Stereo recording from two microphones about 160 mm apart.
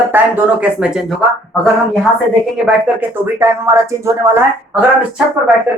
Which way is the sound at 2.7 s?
15° right (ahead or behind).